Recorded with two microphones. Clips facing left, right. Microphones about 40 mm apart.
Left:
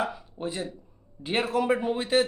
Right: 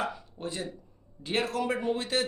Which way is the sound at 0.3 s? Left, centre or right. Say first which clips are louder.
Left 3 dB; centre.